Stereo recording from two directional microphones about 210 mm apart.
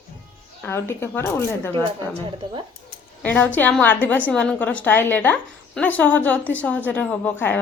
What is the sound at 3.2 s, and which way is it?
Speech, 10° left (ahead or behind).